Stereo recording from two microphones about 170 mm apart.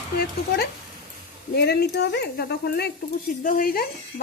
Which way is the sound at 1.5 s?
70° left (ahead or behind).